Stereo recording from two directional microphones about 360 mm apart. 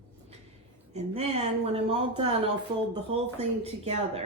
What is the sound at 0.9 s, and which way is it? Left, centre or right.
Speech, centre.